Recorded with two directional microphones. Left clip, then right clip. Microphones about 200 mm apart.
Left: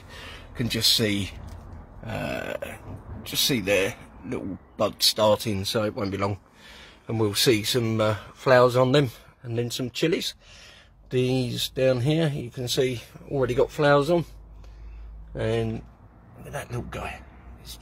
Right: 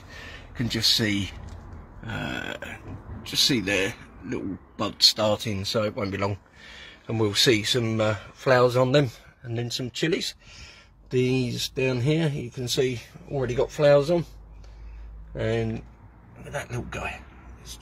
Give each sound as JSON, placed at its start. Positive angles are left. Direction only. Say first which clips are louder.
{"t": 0.1, "sound": "a sound", "louder": "even", "side_deg": 20}
{"t": 2.0, "sound": "burping", "louder": "left 1 dB", "side_deg": 20}
{"t": 3.3, "sound": "speech", "louder": "right 1 dB", "side_deg": 20}
{"t": 15.3, "sound": "speech", "louder": "even", "side_deg": 10}
{"t": 16.9, "sound": "a man's voice", "louder": "right 2 dB", "side_deg": 5}